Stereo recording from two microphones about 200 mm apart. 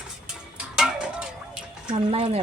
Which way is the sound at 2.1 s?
30° right (ahead or behind).